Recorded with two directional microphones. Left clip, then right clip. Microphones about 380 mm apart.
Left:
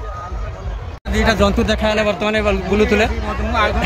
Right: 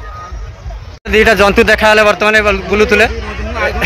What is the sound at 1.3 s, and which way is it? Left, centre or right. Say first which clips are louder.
Speech: right 6 dB; centre.